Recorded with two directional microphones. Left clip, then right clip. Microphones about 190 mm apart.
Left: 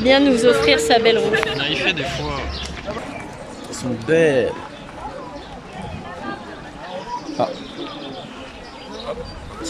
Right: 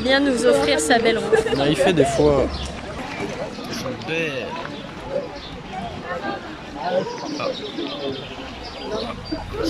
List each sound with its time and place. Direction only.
0.0 s speech: 5° left (ahead or behind)
1.3 s speech: 40° right (ahead or behind)
4.1 s speech: 50° left (ahead or behind)
7.4 s speech: 45° left (ahead or behind)